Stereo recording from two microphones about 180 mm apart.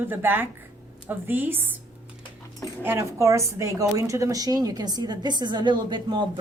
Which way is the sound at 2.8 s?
15° right (ahead or behind).